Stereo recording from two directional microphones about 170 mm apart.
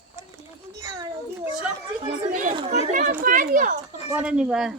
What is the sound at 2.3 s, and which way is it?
Speech, 50° right (ahead or behind).